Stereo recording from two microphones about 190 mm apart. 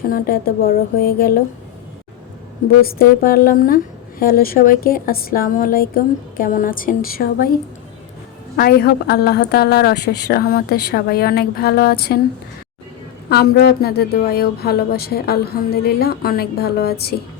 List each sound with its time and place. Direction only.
0.1 s a woman's voice: 50° left (ahead or behind)
2.8 s a woman's voice: 50° left (ahead or behind)
8.5 s speech: 55° left (ahead or behind)
13.3 s speech: 55° left (ahead or behind)